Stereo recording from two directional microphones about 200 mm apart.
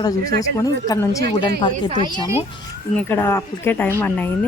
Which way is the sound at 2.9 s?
10° left (ahead or behind).